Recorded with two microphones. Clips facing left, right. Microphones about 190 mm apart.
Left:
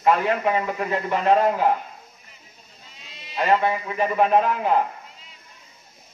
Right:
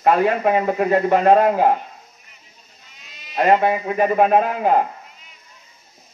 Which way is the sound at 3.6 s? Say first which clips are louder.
Right 5 dB; 50° right (ahead or behind).